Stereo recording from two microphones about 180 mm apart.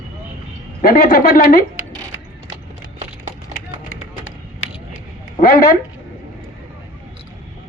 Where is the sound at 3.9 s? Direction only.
90° left.